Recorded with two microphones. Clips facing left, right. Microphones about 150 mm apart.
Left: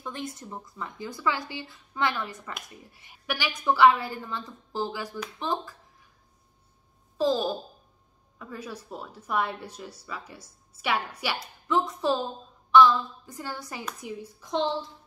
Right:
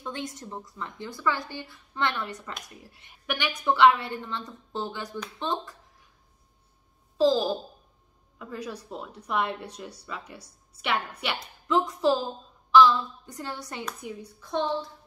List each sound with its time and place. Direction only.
0.0 s a woman's voice: centre (ahead or behind)
7.2 s a woman's voice: centre (ahead or behind)
14.4 s a woman's voice: 20° left (ahead or behind)